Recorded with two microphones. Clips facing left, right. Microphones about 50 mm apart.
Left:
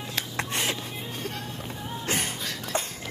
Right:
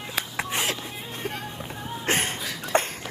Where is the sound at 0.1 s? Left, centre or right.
Centre.